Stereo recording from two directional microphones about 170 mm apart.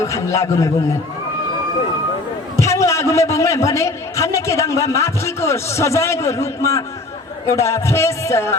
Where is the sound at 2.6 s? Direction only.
15° left (ahead or behind).